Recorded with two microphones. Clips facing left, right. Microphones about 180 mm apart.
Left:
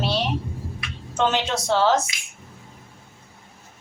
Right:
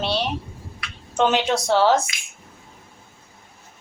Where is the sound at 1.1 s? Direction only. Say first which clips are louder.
Right 3 dB; 15° right (ahead or behind).